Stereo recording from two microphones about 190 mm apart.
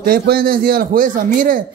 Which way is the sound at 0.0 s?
50° right (ahead or behind).